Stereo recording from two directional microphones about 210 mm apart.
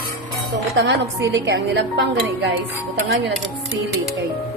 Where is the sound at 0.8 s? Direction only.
60° right (ahead or behind).